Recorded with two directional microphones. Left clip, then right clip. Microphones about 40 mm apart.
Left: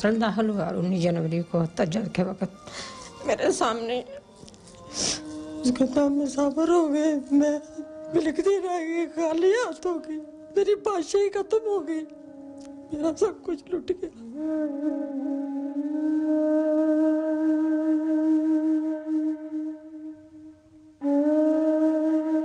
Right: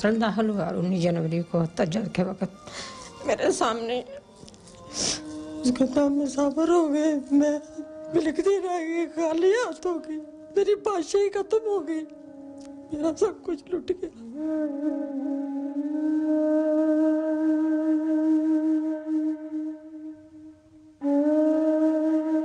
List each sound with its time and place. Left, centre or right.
0.0 s speech: left
12.9 s a sound: left
21.0 s flute: left